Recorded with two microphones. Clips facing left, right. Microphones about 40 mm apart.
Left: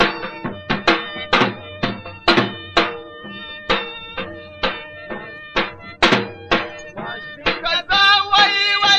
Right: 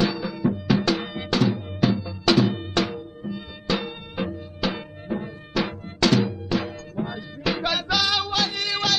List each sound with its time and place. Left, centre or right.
0.0 s music: left
7.5 s music: left